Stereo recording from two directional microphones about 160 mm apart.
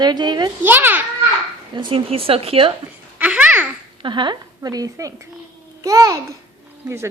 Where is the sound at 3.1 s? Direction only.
10° right (ahead or behind).